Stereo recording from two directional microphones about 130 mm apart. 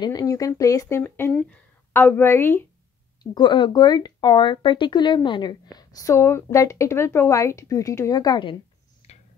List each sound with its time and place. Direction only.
0.0 s speech: 30° left (ahead or behind)
1.3 s speech: 5° left (ahead or behind)
1.9 s a woman's voice: 15° left (ahead or behind)
3.3 s speech: 35° left (ahead or behind)